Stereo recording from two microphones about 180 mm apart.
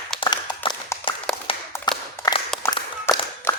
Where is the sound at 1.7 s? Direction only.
25° left (ahead or behind).